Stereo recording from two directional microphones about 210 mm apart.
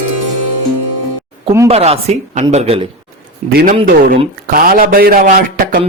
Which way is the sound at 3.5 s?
45° right (ahead or behind).